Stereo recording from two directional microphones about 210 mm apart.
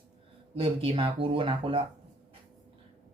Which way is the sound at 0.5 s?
25° right (ahead or behind).